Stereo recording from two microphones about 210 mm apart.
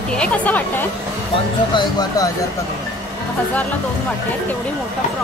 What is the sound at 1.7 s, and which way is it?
Speech, 20° left (ahead or behind).